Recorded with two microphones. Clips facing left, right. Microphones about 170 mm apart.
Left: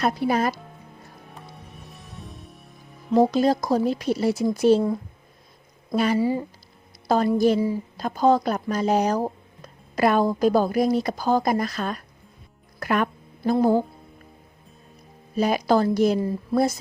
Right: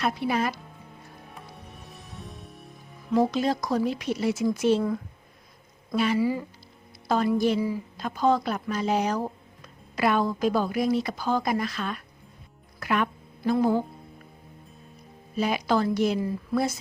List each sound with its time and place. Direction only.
0.0 s speech: 40° left (ahead or behind)
1.4 s music: centre (ahead or behind)
3.1 s speech: 35° left (ahead or behind)
6.1 s speech: 30° left (ahead or behind)
7.3 s speech: 40° left (ahead or behind)
15.4 s speech: 40° left (ahead or behind)